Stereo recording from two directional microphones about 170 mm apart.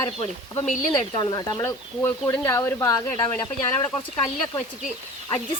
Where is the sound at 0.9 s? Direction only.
25° left (ahead or behind).